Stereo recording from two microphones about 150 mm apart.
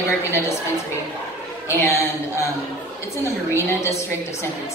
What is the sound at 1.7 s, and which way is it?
Speech, 15° left (ahead or behind).